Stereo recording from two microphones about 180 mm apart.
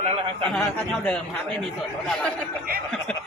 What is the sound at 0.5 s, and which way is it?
Speech, 5° left (ahead or behind).